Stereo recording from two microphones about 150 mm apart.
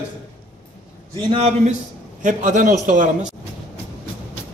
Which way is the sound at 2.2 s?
60° right (ahead or behind).